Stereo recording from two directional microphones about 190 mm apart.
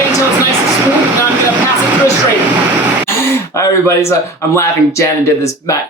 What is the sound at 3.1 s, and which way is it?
Speech, 15° left (ahead or behind).